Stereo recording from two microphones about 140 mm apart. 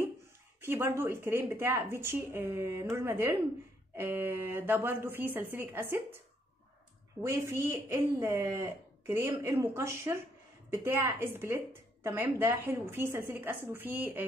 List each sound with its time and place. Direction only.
0.6 s a woman's voice: 15° right (ahead or behind)
7.2 s a woman's voice: 20° right (ahead or behind)